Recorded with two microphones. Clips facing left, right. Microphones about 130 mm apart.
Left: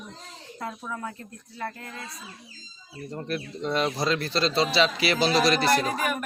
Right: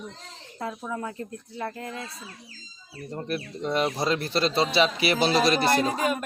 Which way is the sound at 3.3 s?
10° right (ahead or behind).